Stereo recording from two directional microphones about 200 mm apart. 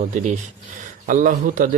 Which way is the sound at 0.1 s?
40° right (ahead or behind).